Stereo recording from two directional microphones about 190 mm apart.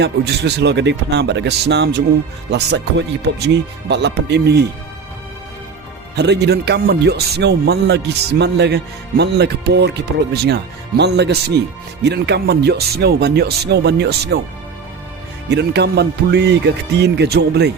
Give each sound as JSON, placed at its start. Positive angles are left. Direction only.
{"t": 0.0, "sound": "speech", "side_deg": -65}
{"t": 6.1, "sound": "speech", "side_deg": -65}
{"t": 15.4, "sound": "speech", "side_deg": -60}